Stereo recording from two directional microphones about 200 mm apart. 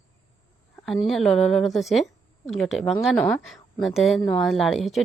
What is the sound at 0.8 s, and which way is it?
A woman's voice, centre (ahead or behind).